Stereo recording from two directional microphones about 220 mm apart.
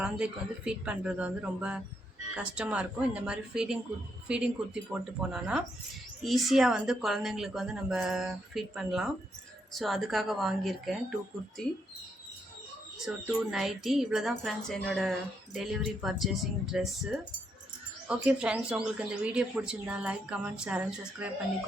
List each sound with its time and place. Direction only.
0.0 s speech: 5° right (ahead or behind)
13.1 s speech: 5° right (ahead or behind)